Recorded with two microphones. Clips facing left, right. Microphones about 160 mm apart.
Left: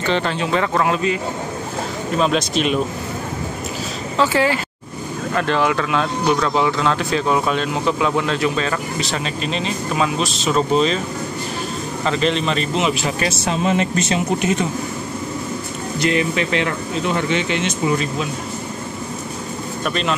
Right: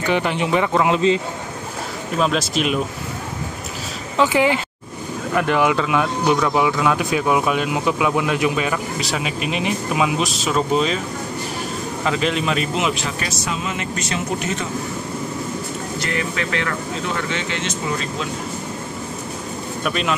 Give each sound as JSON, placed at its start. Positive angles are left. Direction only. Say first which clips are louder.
{"t": 0.0, "sound": "speech", "louder": "even", "side_deg": -15}
{"t": 2.1, "sound": "a man's voice", "louder": "left 1 dB", "side_deg": -5}
{"t": 4.2, "sound": "a man's voice", "louder": "right 1 dB", "side_deg": -15}
{"t": 12.0, "sound": "a man's voice", "louder": "left 2 dB", "side_deg": -5}
{"t": 13.5, "sound": "speech", "louder": "left 10 dB", "side_deg": 30}
{"t": 16.0, "sound": "speech", "louder": "left 7 dB", "side_deg": 20}
{"t": 19.8, "sound": "a man's voice", "louder": "even", "side_deg": -5}